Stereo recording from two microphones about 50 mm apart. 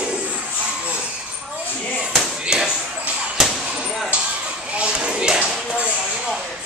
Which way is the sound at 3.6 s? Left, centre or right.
Centre.